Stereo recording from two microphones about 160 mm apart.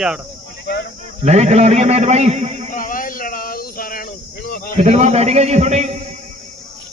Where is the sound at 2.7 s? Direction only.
60° left (ahead or behind).